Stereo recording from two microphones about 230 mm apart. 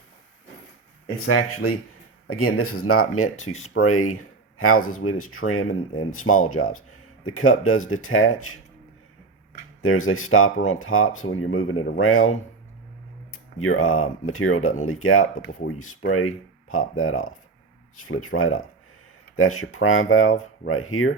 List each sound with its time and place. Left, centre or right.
1.0 s speech: left
9.8 s speech: left